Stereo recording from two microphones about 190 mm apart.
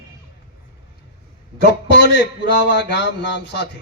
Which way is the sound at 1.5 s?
65° left (ahead or behind).